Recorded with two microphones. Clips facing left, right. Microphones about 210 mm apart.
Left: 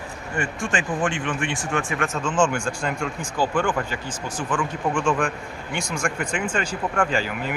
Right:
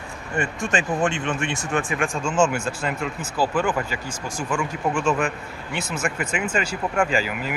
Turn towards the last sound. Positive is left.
turn(degrees=-5)  # may be behind; listen again after turning